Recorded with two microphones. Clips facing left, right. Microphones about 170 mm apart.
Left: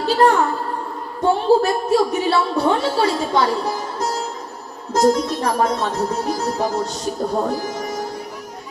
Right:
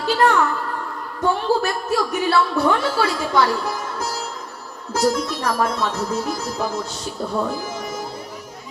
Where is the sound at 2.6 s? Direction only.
30° left (ahead or behind).